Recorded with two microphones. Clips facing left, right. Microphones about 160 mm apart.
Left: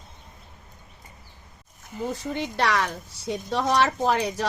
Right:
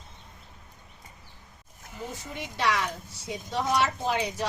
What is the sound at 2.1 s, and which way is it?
Speech, 80° left.